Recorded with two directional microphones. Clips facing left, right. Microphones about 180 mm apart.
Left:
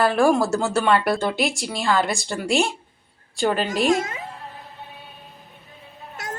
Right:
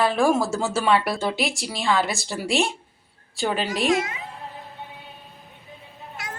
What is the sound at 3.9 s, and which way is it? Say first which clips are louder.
Speech: left 1 dB; 45° left (ahead or behind).